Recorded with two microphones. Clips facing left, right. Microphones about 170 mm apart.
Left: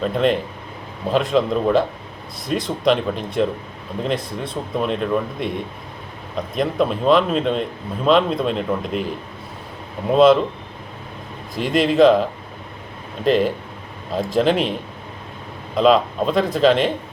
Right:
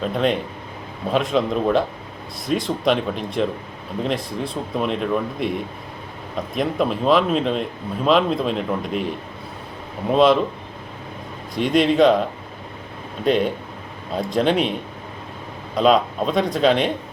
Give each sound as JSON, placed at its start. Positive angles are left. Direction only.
{"t": 0.0, "sound": "speech", "side_deg": 0}
{"t": 11.5, "sound": "speech", "side_deg": 0}